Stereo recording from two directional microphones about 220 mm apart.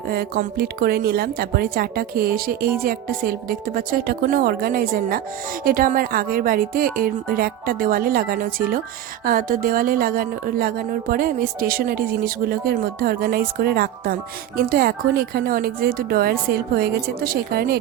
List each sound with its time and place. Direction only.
0.1 s speech: 45° right (ahead or behind)